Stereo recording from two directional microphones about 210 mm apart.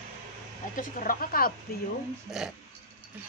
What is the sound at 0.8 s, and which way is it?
Speech, 40° left (ahead or behind).